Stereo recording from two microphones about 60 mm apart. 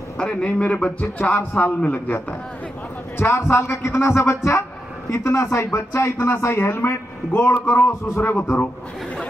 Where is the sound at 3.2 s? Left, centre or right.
Left.